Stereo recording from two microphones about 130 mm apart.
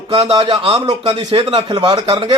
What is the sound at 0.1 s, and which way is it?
Speech, 45° right (ahead or behind).